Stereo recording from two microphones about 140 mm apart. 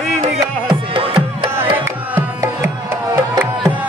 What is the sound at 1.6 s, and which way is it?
Music, 15° right (ahead or behind).